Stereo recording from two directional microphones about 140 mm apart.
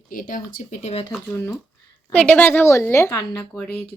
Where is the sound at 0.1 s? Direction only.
75° left (ahead or behind).